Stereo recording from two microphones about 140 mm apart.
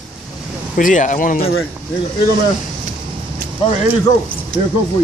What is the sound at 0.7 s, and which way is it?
Speech, 65° left (ahead or behind).